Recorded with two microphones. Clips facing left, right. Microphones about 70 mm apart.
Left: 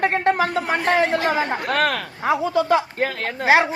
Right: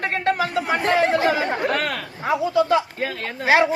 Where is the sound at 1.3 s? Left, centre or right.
Left.